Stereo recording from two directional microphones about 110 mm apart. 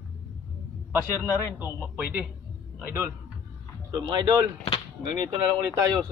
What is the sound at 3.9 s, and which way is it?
Speech, 40° right (ahead or behind).